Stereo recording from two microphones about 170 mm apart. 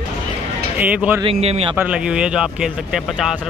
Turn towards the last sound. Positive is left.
turn(degrees=0)  # may be behind; listen again after turning